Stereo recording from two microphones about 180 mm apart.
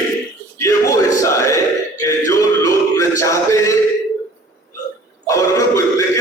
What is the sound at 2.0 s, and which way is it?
Male singing, 20° left (ahead or behind).